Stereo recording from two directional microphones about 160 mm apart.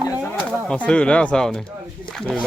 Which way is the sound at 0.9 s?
5° left (ahead or behind).